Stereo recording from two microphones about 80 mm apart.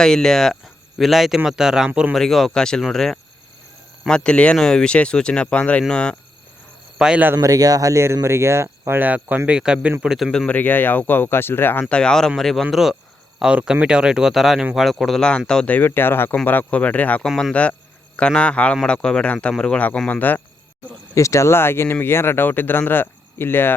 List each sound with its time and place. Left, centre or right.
0.0 s speech: centre
1.9 s speech: centre
2.1 s speech: centre
7.0 s speech: centre
7.4 s speech: right
8.9 s speech: right; by 10.3 s centre
10.3 s speech: centre
11.9 s speech: centre
15.7 s speech: left
17.2 s speech: centre
17.5 s speech: centre
21.2 s speech: left